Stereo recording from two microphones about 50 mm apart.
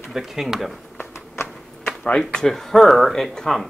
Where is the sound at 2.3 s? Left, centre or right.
Centre.